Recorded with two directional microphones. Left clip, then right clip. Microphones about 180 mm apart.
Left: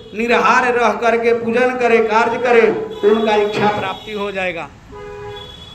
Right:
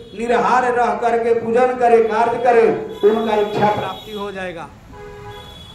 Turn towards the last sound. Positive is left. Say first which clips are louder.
# left 5 dB
turn(degrees=5)  # may be behind; listen again after turning